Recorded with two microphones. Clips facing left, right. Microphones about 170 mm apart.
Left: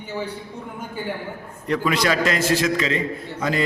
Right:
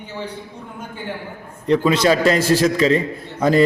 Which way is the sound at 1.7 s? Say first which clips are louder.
Right 6 dB; 25° right (ahead or behind).